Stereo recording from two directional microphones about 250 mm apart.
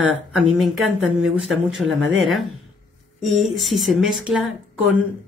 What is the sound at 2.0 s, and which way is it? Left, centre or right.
Speech, right.